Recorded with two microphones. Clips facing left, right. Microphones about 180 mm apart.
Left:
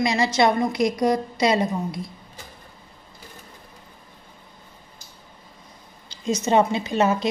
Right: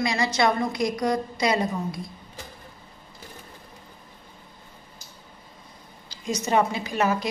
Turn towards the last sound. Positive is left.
turn(degrees=25)  # may be behind; listen again after turning